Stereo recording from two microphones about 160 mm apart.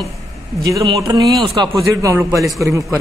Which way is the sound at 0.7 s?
20° right (ahead or behind).